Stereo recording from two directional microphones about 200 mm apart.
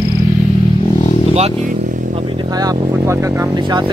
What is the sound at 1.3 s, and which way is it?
Vehicle, 35° right (ahead or behind).